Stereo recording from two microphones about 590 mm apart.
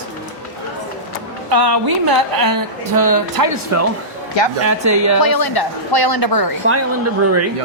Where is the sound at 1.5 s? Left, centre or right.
Right.